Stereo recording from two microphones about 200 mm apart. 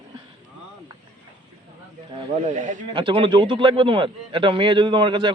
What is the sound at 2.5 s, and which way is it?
Speech, 40° right (ahead or behind).